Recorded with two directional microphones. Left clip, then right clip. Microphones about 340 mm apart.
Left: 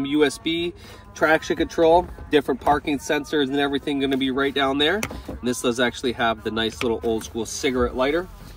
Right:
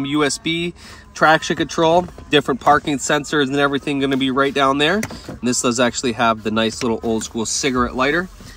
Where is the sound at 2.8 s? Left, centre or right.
Right.